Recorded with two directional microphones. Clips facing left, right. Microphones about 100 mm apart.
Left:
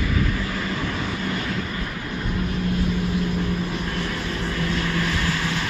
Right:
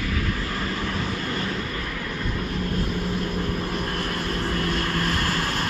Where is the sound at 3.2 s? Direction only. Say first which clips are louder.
Left 2 dB; 45° right (ahead or behind).